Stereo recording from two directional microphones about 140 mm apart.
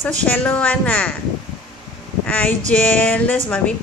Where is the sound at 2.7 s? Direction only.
10° left (ahead or behind).